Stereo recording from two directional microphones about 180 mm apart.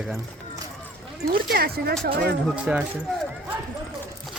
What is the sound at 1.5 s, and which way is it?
Speech, 60° right (ahead or behind).